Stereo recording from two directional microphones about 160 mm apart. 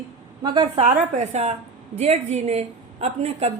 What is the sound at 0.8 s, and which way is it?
A woman's voice, 45° right (ahead or behind).